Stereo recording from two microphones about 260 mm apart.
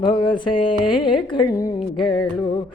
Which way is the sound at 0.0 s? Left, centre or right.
Centre.